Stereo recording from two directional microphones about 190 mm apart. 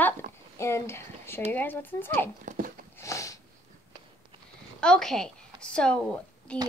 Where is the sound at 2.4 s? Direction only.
45° right (ahead or behind).